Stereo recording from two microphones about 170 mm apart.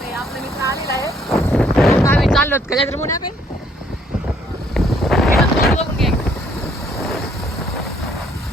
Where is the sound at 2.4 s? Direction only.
10° left (ahead or behind).